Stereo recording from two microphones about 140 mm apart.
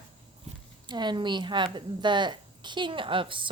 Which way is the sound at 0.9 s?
30° right (ahead or behind).